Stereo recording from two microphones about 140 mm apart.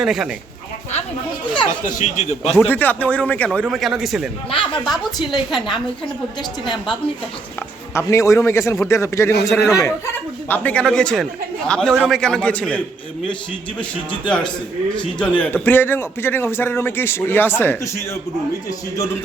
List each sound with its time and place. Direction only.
0.0 s a woman's voice: centre (ahead or behind)
1.8 s a man's voice: 55° left (ahead or behind)
2.6 s a man's voice: 15° left (ahead or behind); by 4.3 s centre (ahead or behind)
4.5 s speech: 35° left (ahead or behind)
4.9 s a woman's voice: centre (ahead or behind)
7.9 s a man's voice: 20° left (ahead or behind)
10.5 s a man's voice: 10° left (ahead or behind)
14.3 s a man's voice: 5° left (ahead or behind)